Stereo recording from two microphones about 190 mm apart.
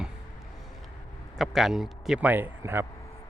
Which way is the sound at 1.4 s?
Centre (ahead or behind).